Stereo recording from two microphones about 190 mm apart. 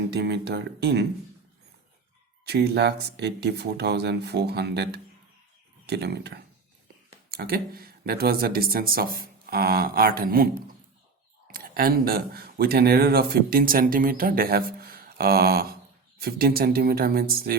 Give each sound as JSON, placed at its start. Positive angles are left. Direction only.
{"t": 0.1, "sound": "speech", "side_deg": -60}
{"t": 2.4, "sound": "speech", "side_deg": -60}